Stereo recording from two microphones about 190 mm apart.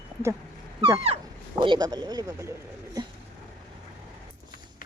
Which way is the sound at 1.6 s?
20° right (ahead or behind).